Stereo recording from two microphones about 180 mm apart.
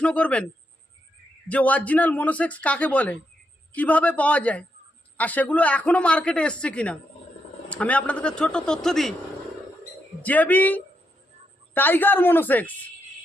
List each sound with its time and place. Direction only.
0.0 s speech: 5° left (ahead or behind)
1.5 s a man's voice: 10° left (ahead or behind)
10.2 s speech: 10° left (ahead or behind)